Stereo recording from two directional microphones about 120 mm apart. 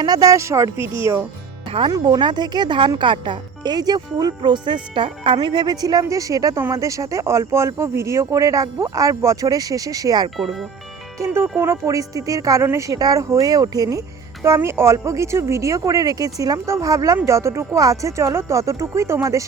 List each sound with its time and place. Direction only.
0.0 s speech: 35° right (ahead or behind)
1.9 s speech: 40° right (ahead or behind)
11.3 s speech: 20° right (ahead or behind)